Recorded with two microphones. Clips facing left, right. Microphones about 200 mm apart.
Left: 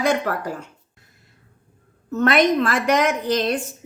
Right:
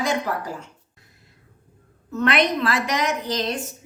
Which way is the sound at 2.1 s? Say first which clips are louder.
Left 4 dB; 45° left (ahead or behind).